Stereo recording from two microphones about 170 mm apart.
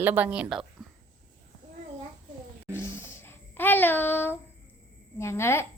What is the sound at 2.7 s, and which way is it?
Child singing, 15° left (ahead or behind).